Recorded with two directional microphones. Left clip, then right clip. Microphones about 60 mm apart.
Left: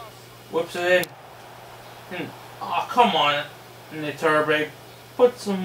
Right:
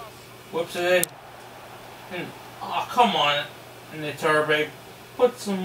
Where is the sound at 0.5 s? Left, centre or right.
Left.